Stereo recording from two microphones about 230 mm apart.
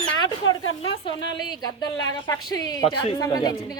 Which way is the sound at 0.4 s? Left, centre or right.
Left.